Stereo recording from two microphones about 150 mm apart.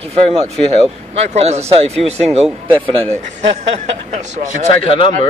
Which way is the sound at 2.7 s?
10° left (ahead or behind).